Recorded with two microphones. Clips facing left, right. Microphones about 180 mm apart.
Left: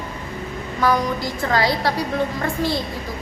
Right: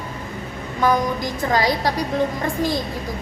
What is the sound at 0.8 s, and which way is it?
A woman's voice, 15° right (ahead or behind).